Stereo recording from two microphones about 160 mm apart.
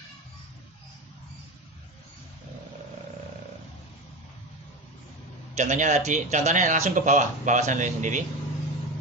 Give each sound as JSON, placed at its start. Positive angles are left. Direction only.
{"t": 5.5, "sound": "speech", "side_deg": -50}